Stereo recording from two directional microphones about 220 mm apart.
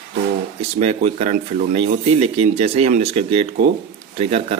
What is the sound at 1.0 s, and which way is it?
A man's voice, 30° right (ahead or behind).